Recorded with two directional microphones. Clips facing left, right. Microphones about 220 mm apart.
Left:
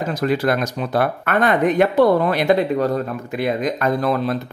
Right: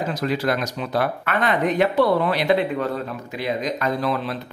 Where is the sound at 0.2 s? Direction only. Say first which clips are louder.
Left 5 dB; 50° left (ahead or behind).